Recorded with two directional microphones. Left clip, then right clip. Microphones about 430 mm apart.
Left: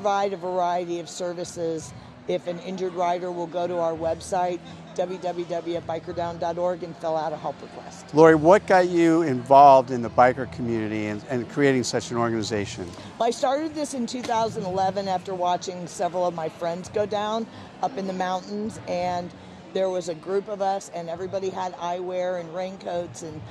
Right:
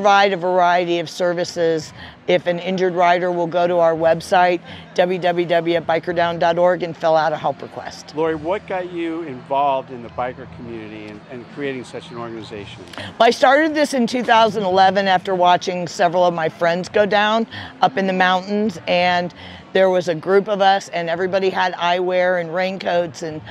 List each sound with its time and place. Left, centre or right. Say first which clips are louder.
0.0 s speech: right 10 dB; right
8.2 s speech: left 6 dB; left
13.2 s speech: right 10 dB; right